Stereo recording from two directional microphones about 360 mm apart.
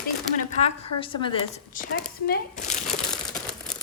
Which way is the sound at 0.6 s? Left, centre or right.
Centre.